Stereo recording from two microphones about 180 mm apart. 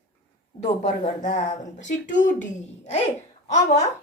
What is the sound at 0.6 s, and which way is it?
A woman's voice, 40° left (ahead or behind).